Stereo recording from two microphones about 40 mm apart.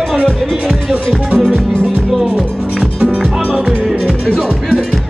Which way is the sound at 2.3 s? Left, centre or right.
Right.